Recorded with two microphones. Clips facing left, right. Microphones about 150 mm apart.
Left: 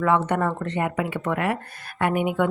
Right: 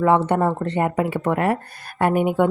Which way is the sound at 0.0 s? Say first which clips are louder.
Right 4 dB; 30° right (ahead or behind).